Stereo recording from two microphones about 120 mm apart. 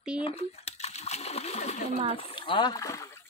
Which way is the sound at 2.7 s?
25° left (ahead or behind).